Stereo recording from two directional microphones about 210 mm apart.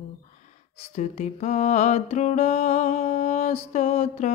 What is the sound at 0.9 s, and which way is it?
Music, 30° left (ahead or behind).